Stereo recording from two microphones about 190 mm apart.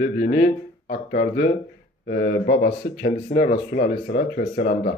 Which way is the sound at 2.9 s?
40° left (ahead or behind).